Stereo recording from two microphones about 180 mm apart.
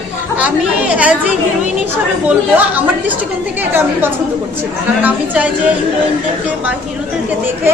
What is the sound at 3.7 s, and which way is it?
Speech, 10° right (ahead or behind).